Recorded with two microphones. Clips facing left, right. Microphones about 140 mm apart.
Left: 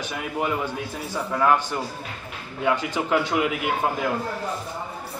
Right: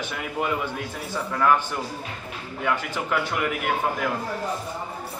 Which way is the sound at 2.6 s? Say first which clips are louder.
Left 3 dB; 20° left (ahead or behind).